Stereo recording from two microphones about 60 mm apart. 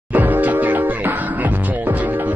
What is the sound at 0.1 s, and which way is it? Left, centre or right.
Music, right.